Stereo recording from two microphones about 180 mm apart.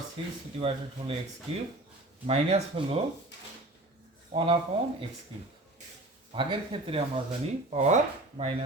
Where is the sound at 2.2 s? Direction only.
35° right (ahead or behind).